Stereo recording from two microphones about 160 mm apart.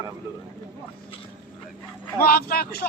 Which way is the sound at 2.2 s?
70° left (ahead or behind).